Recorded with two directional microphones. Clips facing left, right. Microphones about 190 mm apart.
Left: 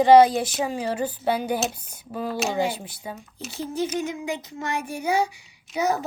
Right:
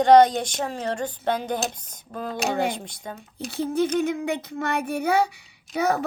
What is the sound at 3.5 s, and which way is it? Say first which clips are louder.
Speech: right 4 dB; 55° right (ahead or behind).